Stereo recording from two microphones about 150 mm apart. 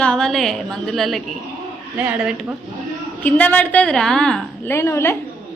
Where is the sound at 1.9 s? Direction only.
10° right (ahead or behind).